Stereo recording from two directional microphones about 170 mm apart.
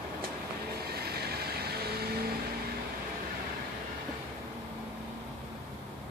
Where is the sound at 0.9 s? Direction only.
65° right (ahead or behind).